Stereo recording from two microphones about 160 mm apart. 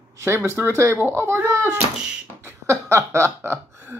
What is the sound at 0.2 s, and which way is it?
Speech, 15° right (ahead or behind).